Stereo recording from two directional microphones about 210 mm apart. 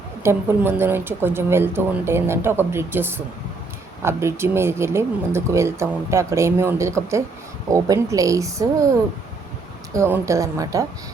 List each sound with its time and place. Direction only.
0.2 s speech: 10° right (ahead or behind)
9.9 s speech: 15° right (ahead or behind)